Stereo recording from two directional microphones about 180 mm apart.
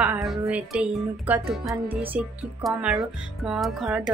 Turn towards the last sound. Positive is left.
turn(degrees=-5)  # may be behind; listen again after turning